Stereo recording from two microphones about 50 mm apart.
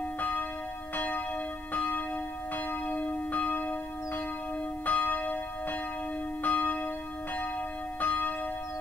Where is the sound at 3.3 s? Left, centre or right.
Left.